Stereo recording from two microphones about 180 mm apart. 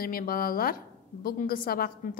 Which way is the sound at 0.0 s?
55° left (ahead or behind).